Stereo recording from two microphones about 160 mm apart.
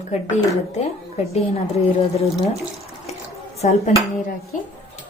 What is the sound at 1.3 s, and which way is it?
Speech, 40° left (ahead or behind).